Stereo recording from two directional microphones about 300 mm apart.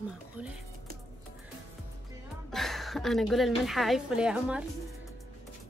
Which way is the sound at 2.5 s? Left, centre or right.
Centre.